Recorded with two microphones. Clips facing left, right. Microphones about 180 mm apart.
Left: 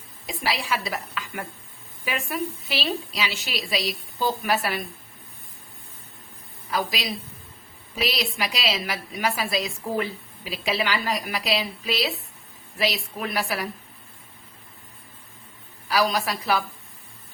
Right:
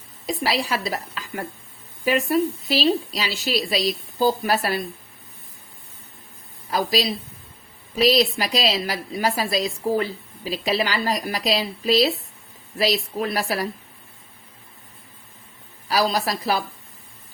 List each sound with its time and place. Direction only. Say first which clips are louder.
0.3 s a woman's voice: right 4 dB; 40° right (ahead or behind)
6.7 s a woman's voice: right 5 dB; 35° right (ahead or behind)
15.9 s a woman's voice: right 2 dB; 35° right (ahead or behind)